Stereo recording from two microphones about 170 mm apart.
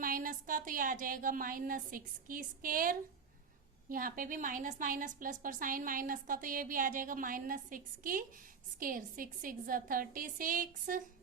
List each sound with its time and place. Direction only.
0.0 s a woman's voice: 55° right (ahead or behind)